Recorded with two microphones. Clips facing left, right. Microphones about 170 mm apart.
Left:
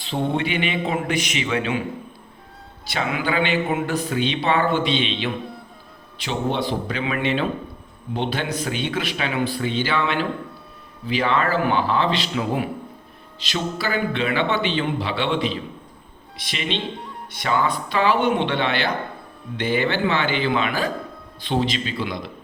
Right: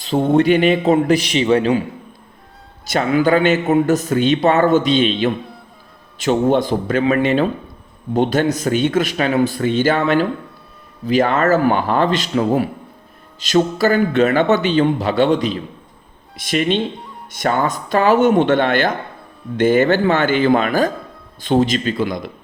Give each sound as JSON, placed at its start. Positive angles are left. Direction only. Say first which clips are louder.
{"t": 0.0, "sound": "a man's voice", "louder": "right 9 dB", "side_deg": -45}
{"t": 2.8, "sound": "a man's voice", "louder": "right 9 dB", "side_deg": -40}